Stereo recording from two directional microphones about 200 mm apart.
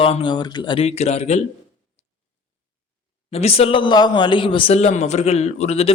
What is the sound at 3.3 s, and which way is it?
Speech, 30° left (ahead or behind).